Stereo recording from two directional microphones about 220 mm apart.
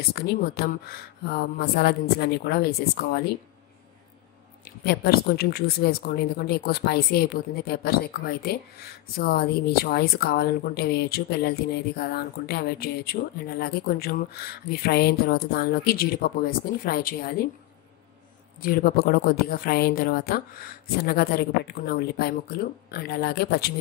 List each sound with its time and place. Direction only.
0.1 s a woman's voice: 45° left (ahead or behind)
4.8 s a woman's voice: 45° left (ahead or behind)
18.6 s a woman's voice: 40° left (ahead or behind)